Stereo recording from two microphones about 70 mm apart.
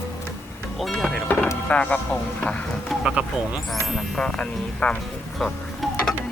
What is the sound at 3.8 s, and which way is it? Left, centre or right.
Speech, centre.